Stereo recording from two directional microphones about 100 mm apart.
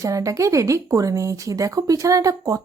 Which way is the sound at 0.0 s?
35° right (ahead or behind).